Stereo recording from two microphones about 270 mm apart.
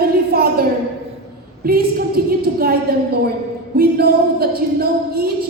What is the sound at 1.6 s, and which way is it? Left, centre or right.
A woman's voice, right.